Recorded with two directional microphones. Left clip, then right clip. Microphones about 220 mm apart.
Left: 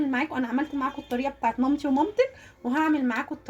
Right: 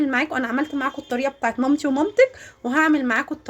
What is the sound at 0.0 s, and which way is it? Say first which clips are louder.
Speech: right 6 dB; 25° right (ahead or behind).